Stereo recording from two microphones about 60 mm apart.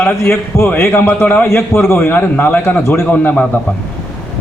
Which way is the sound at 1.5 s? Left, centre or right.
Left.